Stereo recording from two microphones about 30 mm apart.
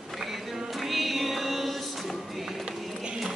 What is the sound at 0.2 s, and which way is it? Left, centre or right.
Music, centre.